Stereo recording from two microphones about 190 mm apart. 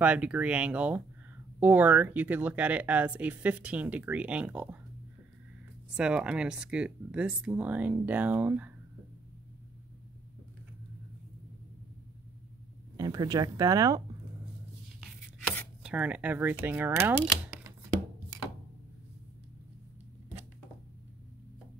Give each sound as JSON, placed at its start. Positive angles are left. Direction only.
{"t": 0.0, "sound": "speech", "side_deg": -5}
{"t": 5.9, "sound": "speech", "side_deg": -5}
{"t": 12.9, "sound": "speech", "side_deg": -20}
{"t": 15.8, "sound": "speech", "side_deg": -5}